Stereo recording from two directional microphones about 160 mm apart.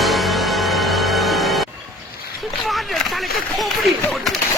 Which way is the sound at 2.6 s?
Centre (ahead or behind).